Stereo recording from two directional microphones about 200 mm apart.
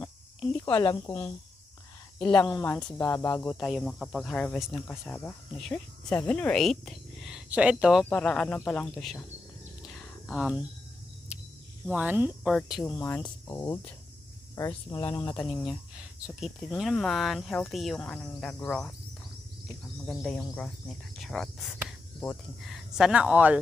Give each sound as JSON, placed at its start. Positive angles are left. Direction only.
{"t": 0.7, "sound": "speech", "side_deg": 25}
{"t": 2.6, "sound": "speech", "side_deg": 5}
{"t": 3.0, "sound": "cricket", "side_deg": 15}
{"t": 3.5, "sound": "speech", "side_deg": 0}
{"t": 8.0, "sound": "speech", "side_deg": 5}
{"t": 10.2, "sound": "speech", "side_deg": 0}
{"t": 11.8, "sound": "speech", "side_deg": -5}
{"t": 12.8, "sound": "cricket", "side_deg": 10}
{"t": 13.2, "sound": "speech", "side_deg": 20}
{"t": 20.1, "sound": "speech", "side_deg": 0}